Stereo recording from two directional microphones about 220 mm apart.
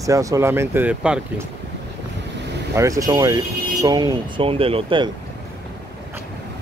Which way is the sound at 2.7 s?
15° right (ahead or behind).